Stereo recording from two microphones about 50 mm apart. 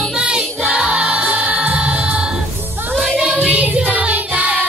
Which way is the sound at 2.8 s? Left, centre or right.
Right.